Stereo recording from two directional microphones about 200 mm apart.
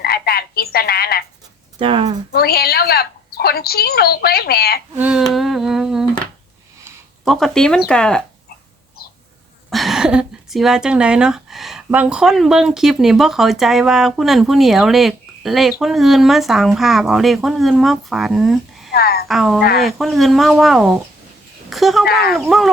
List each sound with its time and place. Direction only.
0.0 s frog: 50° left (ahead or behind)
1.8 s speech: 25° right (ahead or behind)
2.3 s a woman's voice: 50° left (ahead or behind)
4.9 s speech: 5° right (ahead or behind)
7.3 s speech: centre (ahead or behind)
9.6 s speech: centre (ahead or behind)
18.9 s a sound: 50° left (ahead or behind)
19.3 s speech: centre (ahead or behind)
22.0 s a woman's voice: 50° left (ahead or behind)
22.3 s speech: centre (ahead or behind)